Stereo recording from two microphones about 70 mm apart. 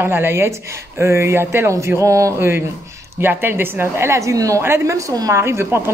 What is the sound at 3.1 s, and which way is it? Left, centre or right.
Speech, right.